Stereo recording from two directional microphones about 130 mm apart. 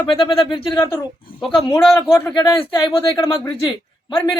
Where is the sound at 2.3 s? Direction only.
35° left (ahead or behind).